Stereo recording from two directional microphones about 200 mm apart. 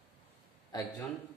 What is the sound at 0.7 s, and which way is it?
Speech, 20° left (ahead or behind).